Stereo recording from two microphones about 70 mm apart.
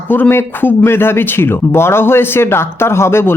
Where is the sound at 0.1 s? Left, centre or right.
Left.